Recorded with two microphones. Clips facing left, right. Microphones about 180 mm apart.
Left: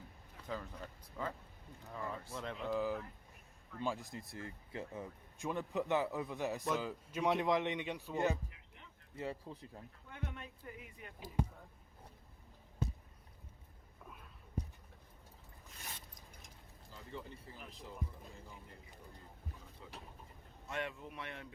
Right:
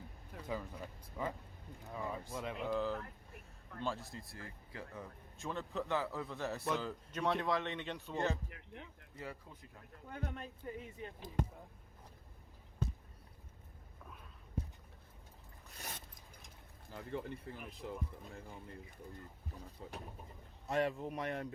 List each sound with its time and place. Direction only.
0.4 s speech: 10° right (ahead or behind)
2.6 s speech: 5° left (ahead or behind)
3.8 s speech: 15° left (ahead or behind)
6.7 s speech: 5° left (ahead or behind)
8.4 s speech: 65° right (ahead or behind)
9.1 s speech: 25° left (ahead or behind)
10.1 s speech: 35° right (ahead or behind)
16.9 s speech: 55° right (ahead or behind)
19.8 s speech: 45° right (ahead or behind)